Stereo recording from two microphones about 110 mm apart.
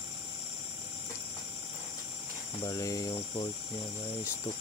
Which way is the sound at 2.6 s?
30° left (ahead or behind).